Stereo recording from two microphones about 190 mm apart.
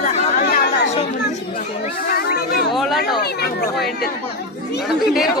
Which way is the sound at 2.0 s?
55° left (ahead or behind).